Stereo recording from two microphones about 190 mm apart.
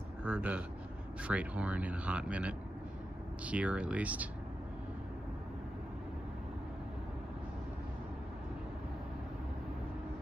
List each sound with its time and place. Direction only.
0.2 s speech: 5° right (ahead or behind)